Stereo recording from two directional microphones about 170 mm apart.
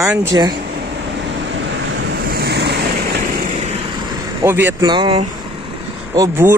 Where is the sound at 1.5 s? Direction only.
80° right.